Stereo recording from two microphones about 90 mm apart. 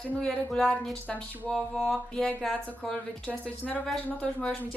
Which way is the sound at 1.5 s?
5° left (ahead or behind).